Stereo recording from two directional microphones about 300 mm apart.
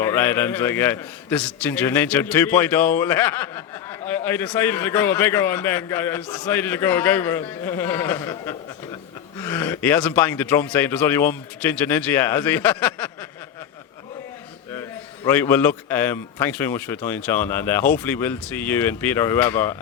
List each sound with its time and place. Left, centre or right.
0.0 s a man's voice: centre
14.7 s a man's voice: centre